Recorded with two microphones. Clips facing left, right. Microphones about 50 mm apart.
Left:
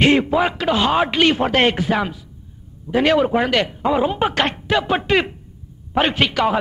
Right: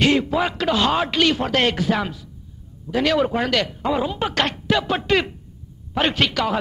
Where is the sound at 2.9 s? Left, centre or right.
Left.